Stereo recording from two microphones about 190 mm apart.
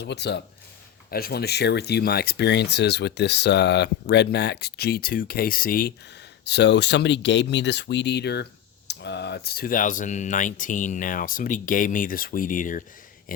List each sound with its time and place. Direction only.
0.0 s speech: 65° left (ahead or behind)
6.4 s speech: 65° left (ahead or behind); by 12.8 s 45° left (ahead or behind)